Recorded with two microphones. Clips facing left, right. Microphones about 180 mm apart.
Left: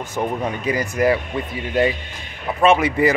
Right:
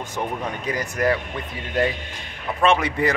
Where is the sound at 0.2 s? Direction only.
15° left (ahead or behind).